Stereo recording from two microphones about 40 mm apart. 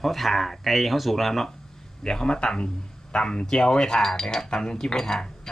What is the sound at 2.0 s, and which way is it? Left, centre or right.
Speech, centre.